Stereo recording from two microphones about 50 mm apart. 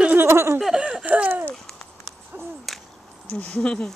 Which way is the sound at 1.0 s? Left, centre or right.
Right.